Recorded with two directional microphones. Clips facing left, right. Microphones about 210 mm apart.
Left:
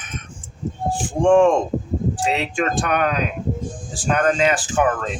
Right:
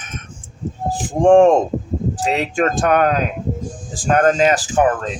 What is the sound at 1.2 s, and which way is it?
Speech, 40° right (ahead or behind).